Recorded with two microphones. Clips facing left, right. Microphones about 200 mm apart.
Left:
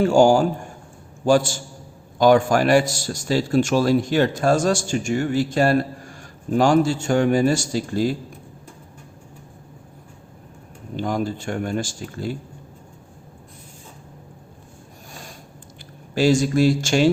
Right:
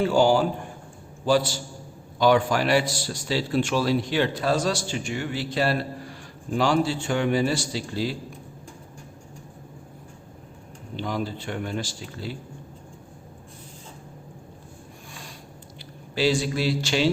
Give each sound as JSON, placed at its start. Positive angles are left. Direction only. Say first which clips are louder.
{"t": 0.0, "sound": "a man's voice", "louder": "left 5 dB", "side_deg": 45}
{"t": 10.9, "sound": "a man's voice", "louder": "left 5 dB", "side_deg": 45}
{"t": 16.1, "sound": "a man's voice", "louder": "left 6 dB", "side_deg": 45}